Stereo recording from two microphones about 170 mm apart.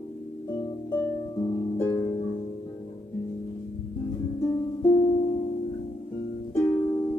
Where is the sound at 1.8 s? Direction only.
20° left (ahead or behind).